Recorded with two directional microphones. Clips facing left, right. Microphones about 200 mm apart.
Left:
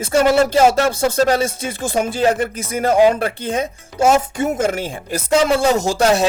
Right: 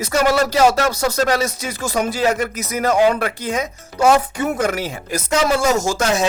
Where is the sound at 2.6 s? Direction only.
30° left (ahead or behind).